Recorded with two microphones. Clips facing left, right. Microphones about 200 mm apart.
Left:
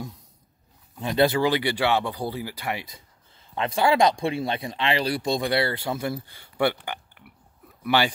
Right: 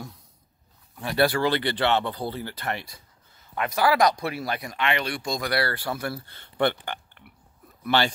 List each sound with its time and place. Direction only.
0.9 s speech: 20° left (ahead or behind)
3.3 s speech: 25° left (ahead or behind); by 8.1 s 10° left (ahead or behind)